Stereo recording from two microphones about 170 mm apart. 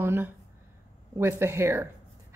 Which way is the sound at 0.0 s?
15° right (ahead or behind).